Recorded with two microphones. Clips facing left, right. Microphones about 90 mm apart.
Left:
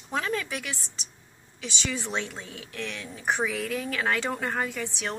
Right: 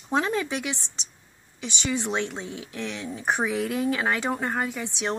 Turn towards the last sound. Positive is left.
turn(degrees=-15)  # may be behind; listen again after turning